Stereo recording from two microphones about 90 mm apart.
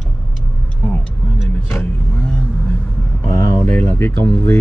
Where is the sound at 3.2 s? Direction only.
20° left (ahead or behind).